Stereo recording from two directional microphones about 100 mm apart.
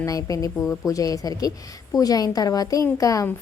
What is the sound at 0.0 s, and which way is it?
A woman's voice, 35° left (ahead or behind).